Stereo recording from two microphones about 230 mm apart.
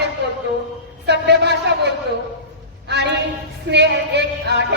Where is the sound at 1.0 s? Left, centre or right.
Right.